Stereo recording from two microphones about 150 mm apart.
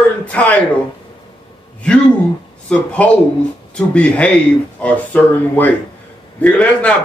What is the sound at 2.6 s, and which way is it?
A man's voice, 10° left (ahead or behind).